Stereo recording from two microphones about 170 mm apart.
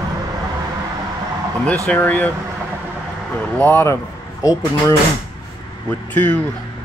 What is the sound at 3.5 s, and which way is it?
Speech, 10° left (ahead or behind).